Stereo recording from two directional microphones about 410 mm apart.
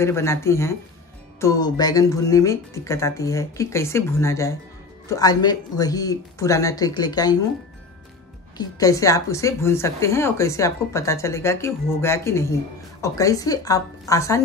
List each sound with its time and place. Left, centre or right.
0.0 s a woman's voice: centre
8.5 s a woman's voice: centre